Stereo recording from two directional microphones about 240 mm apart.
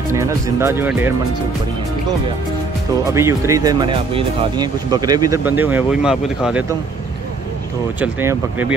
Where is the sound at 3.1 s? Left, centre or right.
Centre.